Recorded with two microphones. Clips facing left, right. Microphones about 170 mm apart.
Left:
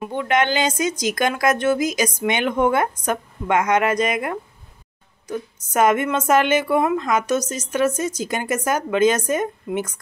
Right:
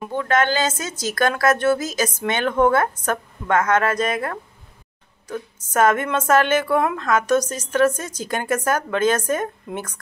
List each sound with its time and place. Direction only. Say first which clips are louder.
0.1 s a woman's voice: even; 15° left (ahead or behind)